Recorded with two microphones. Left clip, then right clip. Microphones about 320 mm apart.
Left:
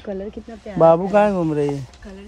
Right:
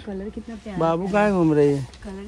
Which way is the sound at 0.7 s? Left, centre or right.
Left.